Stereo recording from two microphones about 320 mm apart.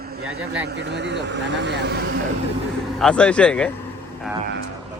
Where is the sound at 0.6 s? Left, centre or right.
Right.